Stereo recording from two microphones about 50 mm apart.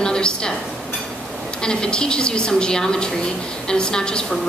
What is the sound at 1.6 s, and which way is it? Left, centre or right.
A woman's voice, centre.